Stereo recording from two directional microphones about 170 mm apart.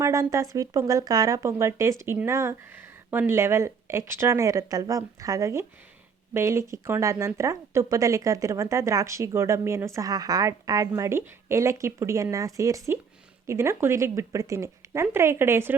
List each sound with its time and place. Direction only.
0.0 s speech: 20° right (ahead or behind)